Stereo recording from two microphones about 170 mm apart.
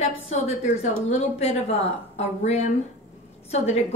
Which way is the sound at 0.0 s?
40° left (ahead or behind).